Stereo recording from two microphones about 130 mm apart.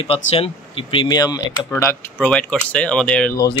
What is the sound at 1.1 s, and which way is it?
Speech, 30° left (ahead or behind).